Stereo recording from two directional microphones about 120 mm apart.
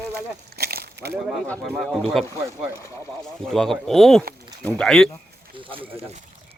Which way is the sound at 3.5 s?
5° left (ahead or behind).